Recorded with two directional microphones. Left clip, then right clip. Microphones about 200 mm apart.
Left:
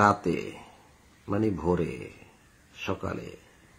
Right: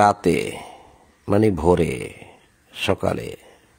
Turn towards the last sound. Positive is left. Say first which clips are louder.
# right 11 dB
turn(degrees=-55)  # may be behind; listen again after turning